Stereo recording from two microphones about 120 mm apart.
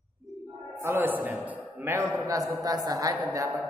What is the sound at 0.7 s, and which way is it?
A man's voice, 20° right (ahead or behind).